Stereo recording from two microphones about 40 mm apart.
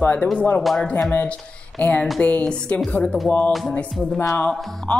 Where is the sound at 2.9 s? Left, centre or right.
Left.